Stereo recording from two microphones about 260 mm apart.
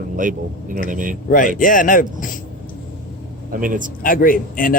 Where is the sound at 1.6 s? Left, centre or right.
Left.